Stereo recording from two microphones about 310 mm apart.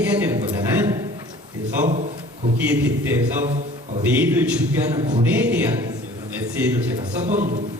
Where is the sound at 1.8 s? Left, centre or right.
Right.